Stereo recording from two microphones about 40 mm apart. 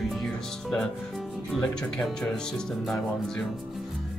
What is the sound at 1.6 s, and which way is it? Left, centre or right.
Speech, centre.